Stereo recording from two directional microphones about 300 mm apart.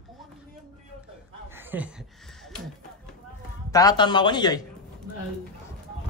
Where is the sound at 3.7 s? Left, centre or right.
Centre.